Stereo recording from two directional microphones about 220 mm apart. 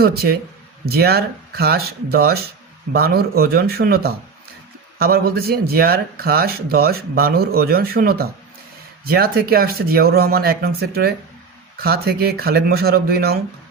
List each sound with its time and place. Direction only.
0.0 s speech: 45° right (ahead or behind)